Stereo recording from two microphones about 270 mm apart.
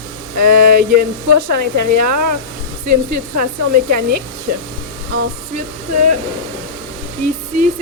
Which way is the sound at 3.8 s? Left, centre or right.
Right.